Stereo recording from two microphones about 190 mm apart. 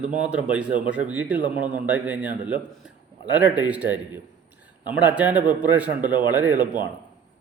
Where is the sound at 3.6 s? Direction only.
10° right (ahead or behind).